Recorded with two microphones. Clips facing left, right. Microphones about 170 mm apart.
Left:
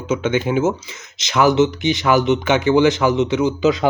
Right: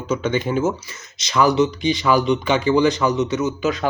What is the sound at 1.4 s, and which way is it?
Speech, 90° left.